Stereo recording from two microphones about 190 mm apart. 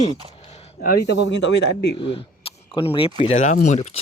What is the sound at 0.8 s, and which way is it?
Speech, 50° left (ahead or behind).